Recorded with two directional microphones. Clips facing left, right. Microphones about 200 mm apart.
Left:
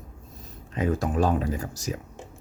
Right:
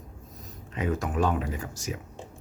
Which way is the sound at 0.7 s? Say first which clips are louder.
Left 3 dB; 35° left (ahead or behind).